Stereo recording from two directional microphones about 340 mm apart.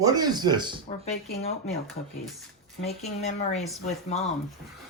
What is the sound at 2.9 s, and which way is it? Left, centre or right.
Speech, centre.